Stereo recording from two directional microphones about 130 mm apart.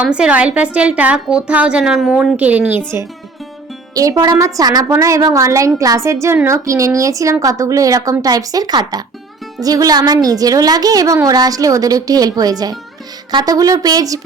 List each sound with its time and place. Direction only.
0.0 s a woman's voice: 10° right (ahead or behind)
3.9 s a woman's voice: 30° right (ahead or behind)